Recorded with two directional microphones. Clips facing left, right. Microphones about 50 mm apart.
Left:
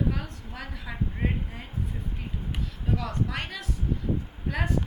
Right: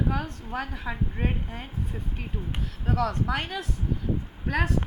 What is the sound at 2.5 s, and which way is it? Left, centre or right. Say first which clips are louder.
Speech: right 4 dB; right.